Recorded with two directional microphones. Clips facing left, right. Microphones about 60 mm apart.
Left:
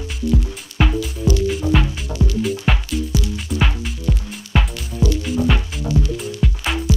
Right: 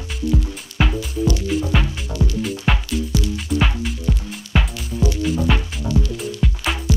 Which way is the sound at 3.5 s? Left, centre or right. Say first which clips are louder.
Right 2 dB; centre.